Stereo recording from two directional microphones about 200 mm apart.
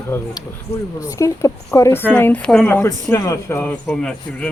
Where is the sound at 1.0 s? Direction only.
15° left (ahead or behind).